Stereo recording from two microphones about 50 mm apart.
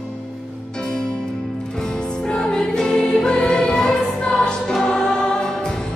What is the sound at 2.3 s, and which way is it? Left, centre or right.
Music, centre.